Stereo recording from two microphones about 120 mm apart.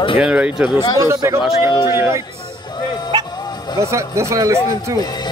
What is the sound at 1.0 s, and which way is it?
Speech, 25° right (ahead or behind).